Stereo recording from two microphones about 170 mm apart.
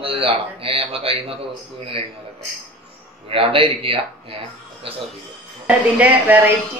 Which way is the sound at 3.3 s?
30° right (ahead or behind).